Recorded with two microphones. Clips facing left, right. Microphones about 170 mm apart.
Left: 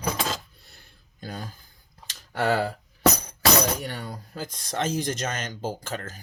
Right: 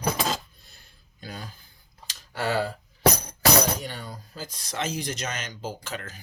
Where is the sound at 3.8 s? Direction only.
60° left (ahead or behind).